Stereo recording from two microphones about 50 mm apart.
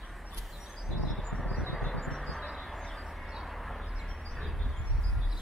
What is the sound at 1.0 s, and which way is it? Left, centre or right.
Vehicle, centre.